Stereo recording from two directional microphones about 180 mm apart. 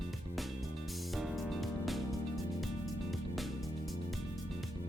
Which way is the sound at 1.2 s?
Centre (ahead or behind).